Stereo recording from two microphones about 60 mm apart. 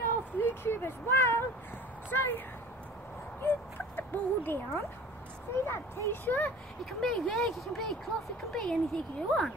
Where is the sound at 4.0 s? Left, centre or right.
Left.